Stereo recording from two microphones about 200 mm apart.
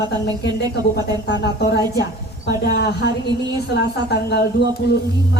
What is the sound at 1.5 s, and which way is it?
A woman's voice, 55° left (ahead or behind).